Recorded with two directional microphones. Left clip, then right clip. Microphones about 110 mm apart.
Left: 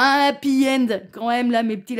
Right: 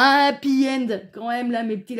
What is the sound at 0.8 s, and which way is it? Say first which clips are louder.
Speech: left 4 dB; 40° left (ahead or behind).